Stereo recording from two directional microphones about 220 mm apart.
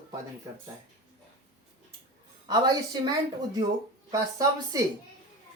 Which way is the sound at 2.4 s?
15° right (ahead or behind).